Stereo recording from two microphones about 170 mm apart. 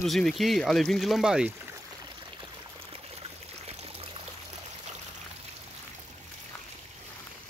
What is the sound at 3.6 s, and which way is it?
Stream, 35° right (ahead or behind).